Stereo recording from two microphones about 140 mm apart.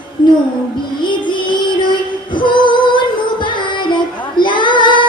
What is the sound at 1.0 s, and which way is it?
Female singing, 35° left (ahead or behind).